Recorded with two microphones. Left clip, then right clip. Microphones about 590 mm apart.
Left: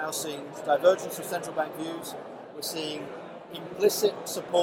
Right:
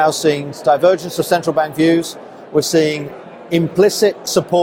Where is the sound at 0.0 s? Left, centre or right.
Right.